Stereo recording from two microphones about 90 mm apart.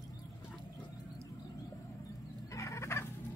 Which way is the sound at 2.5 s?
35° left (ahead or behind).